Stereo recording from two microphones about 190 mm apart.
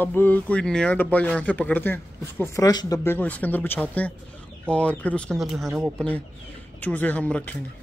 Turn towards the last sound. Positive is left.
turn(degrees=10)  # may be behind; listen again after turning